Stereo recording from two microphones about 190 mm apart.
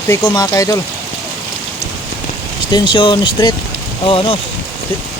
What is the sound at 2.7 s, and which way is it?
Speech, 25° left (ahead or behind).